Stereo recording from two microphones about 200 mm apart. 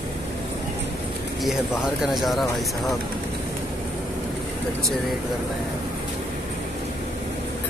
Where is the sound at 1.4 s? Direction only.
Centre (ahead or behind).